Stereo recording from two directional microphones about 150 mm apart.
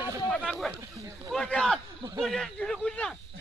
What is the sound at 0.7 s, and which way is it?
Speech, 20° right (ahead or behind).